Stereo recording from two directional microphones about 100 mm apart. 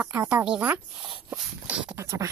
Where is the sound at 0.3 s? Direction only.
10° right (ahead or behind).